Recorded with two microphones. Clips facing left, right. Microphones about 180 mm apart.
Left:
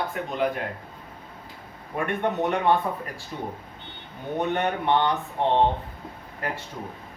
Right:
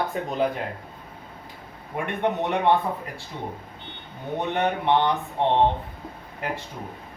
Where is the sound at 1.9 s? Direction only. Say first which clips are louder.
Even; 20° right (ahead or behind).